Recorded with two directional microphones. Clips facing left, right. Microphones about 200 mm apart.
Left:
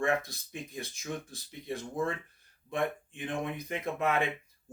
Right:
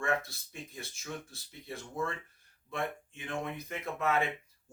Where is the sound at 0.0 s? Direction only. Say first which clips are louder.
Left 3 dB; 15° left (ahead or behind).